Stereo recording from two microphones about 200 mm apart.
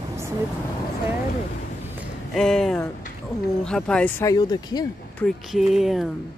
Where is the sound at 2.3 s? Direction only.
Centre (ahead or behind); by 4.8 s 20° left (ahead or behind).